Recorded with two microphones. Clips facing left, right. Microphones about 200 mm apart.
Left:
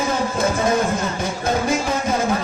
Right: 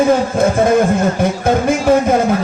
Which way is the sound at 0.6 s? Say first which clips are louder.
Right 7 dB; 55° right (ahead or behind).